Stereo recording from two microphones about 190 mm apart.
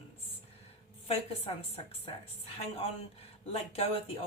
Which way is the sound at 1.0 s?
30° left (ahead or behind).